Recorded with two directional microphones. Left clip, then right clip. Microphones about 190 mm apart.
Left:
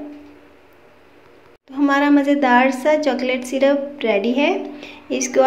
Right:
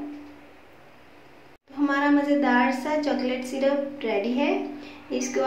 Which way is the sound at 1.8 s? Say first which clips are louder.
Left 7 dB; 40° left (ahead or behind).